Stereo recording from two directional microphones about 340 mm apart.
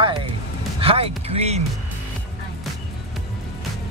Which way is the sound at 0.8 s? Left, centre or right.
Centre.